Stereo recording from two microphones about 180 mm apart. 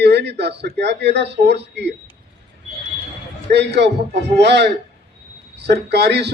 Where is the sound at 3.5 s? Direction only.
70° right (ahead or behind).